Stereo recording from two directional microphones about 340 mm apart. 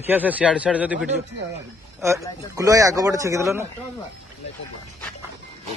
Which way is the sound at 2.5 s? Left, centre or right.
Centre.